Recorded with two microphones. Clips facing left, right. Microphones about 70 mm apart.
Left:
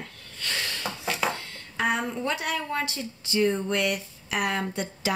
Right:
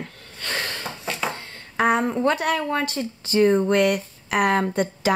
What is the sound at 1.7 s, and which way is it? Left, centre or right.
Speech, right.